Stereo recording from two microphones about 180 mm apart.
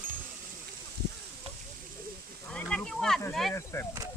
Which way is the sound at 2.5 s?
5° left (ahead or behind).